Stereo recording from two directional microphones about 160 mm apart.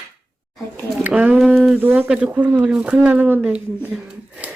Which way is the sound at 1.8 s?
10° right (ahead or behind).